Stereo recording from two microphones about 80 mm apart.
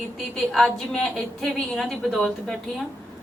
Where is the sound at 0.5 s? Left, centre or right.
Centre.